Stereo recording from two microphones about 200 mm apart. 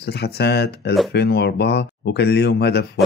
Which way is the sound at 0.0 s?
55° left (ahead or behind).